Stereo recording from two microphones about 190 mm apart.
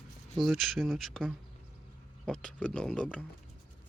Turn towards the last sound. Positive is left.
turn(degrees=5)  # may be behind; listen again after turning